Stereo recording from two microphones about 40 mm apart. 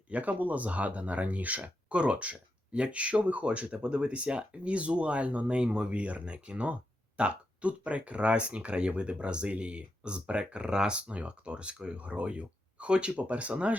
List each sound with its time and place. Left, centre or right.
0.1 s speech: right